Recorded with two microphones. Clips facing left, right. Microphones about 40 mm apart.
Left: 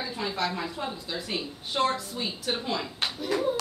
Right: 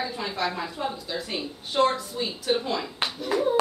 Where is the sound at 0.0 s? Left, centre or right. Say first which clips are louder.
Right 2 dB; centre.